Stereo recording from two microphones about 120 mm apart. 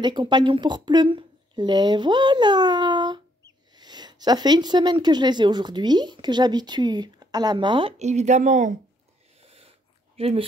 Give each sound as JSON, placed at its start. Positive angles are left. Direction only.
{"t": 0.0, "sound": "speech", "side_deg": -40}
{"t": 8.0, "sound": "a woman's voice", "side_deg": -70}
{"t": 9.4, "sound": "a sound", "side_deg": -55}
{"t": 10.1, "sound": "speech", "side_deg": -55}